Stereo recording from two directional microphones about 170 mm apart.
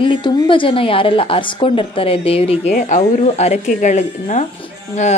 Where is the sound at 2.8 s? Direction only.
50° left (ahead or behind).